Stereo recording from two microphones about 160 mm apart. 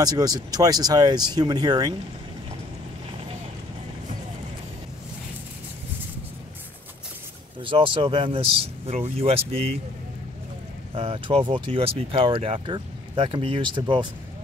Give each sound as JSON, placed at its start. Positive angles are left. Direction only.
{"t": 0.0, "sound": "speech", "side_deg": -25}
{"t": 7.6, "sound": "speech", "side_deg": -35}
{"t": 11.0, "sound": "speech", "side_deg": -35}